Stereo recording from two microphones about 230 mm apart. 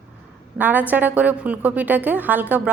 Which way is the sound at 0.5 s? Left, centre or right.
Centre.